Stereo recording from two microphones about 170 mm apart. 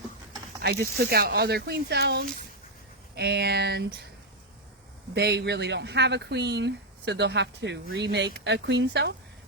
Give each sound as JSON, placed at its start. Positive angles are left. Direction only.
{"t": 0.6, "sound": "speech", "side_deg": -65}
{"t": 5.1, "sound": "speech", "side_deg": -75}